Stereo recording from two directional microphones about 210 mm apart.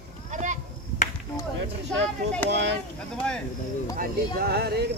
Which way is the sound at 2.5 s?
55° right (ahead or behind).